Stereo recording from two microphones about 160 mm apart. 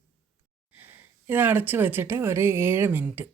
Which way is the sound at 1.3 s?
10° right (ahead or behind).